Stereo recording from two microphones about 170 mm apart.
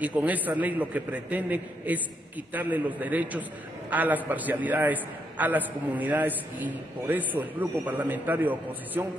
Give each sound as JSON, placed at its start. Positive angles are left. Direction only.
{"t": 0.0, "sound": "a man's voice", "side_deg": -10}